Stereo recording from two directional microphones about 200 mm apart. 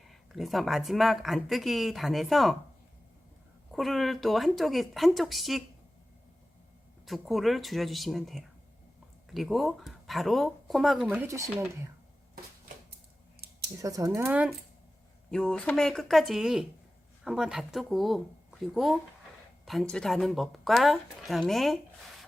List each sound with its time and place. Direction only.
0.1 s speech: centre (ahead or behind)
3.7 s speech: centre (ahead or behind)
7.0 s speech: centre (ahead or behind)
13.4 s scissors: 55° right (ahead or behind)
13.8 s speech: 15° right (ahead or behind)
15.3 s speech: 5° left (ahead or behind)